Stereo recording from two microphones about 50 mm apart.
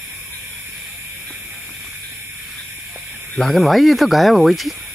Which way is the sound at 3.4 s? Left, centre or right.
Centre.